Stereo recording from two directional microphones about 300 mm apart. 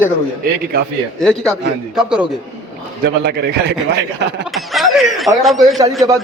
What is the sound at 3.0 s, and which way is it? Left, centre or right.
A man's voice, right.